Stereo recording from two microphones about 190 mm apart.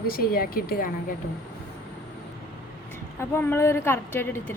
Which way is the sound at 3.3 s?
10° left (ahead or behind).